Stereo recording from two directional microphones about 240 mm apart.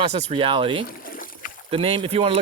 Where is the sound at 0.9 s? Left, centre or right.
Left.